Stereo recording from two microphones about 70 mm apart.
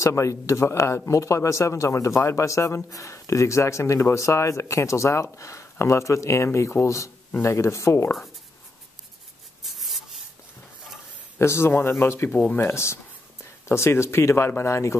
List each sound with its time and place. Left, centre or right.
0.0 s speech: left
9.6 s rub: centre
11.3 s a man's voice: left